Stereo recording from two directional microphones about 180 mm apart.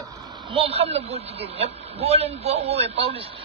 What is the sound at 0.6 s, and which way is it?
Speech, 35° right (ahead or behind).